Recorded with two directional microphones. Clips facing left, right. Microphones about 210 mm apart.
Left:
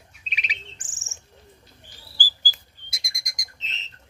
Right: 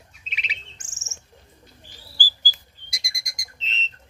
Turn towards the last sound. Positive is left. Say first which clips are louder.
# right 5 dB
turn(degrees=15)  # may be behind; listen again after turning